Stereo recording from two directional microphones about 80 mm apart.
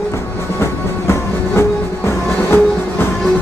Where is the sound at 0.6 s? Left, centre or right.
Left.